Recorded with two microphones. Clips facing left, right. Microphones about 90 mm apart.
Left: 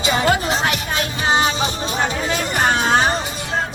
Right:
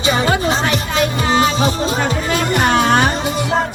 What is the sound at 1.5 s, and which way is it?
Music, 35° right (ahead or behind).